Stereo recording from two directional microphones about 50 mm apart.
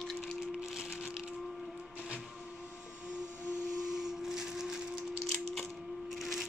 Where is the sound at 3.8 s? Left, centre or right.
Centre.